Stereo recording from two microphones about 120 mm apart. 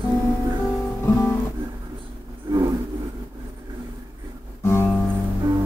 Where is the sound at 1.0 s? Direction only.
20° left (ahead or behind).